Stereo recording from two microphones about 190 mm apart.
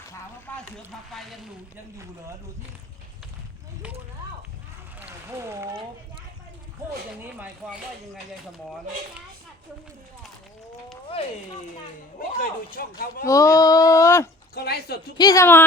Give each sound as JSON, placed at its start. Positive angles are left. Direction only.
{"t": 0.1, "sound": "a sound", "side_deg": 10}
{"t": 1.1, "sound": "speech", "side_deg": 0}
{"t": 4.9, "sound": "a sound", "side_deg": -15}
{"t": 7.2, "sound": "speech", "side_deg": -10}
{"t": 12.4, "sound": "speech", "side_deg": 50}
{"t": 13.2, "sound": "speech", "side_deg": 15}
{"t": 14.5, "sound": "speech", "side_deg": 55}
{"t": 15.2, "sound": "speech", "side_deg": 15}